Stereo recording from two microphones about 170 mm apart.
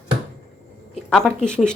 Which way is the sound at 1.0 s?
5° left (ahead or behind).